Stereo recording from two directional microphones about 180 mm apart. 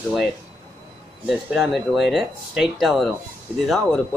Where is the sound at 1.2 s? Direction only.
5° right (ahead or behind).